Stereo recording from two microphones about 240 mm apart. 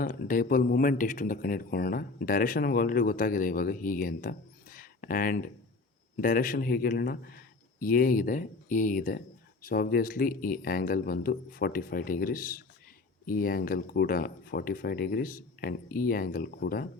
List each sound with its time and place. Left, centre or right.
0.0 s speech: left